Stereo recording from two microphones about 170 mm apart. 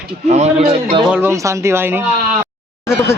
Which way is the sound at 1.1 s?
15° right (ahead or behind).